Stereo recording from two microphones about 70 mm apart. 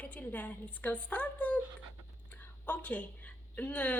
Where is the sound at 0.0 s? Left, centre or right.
Left.